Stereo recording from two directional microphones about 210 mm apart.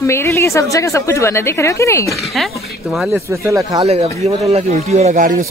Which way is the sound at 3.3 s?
15° right (ahead or behind).